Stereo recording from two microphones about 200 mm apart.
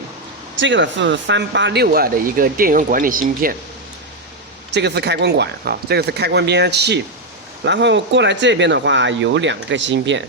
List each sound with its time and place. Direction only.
0.6 s speech: 65° right (ahead or behind); by 3.5 s 45° right (ahead or behind)
4.7 s speech: 60° right (ahead or behind)